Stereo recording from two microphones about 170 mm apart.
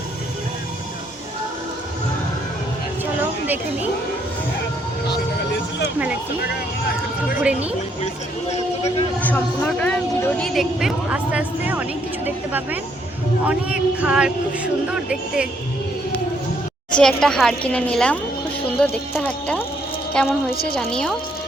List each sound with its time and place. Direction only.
8.5 s speech: 40° left (ahead or behind)
9.2 s speech: 10° left (ahead or behind)
16.9 s speech: 5° left (ahead or behind)